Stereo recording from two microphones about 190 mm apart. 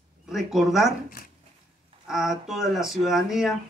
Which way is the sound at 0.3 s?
Centre (ahead or behind).